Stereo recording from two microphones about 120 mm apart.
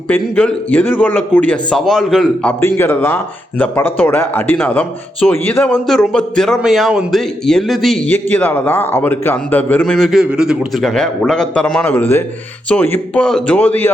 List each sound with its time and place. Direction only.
0.1 s a man's voice: 10° left (ahead or behind)
1.8 s a man's voice: centre (ahead or behind)
2.6 s a man's voice: 20° left (ahead or behind); by 8.1 s centre (ahead or behind)
8.1 s a man's voice: 15° left (ahead or behind)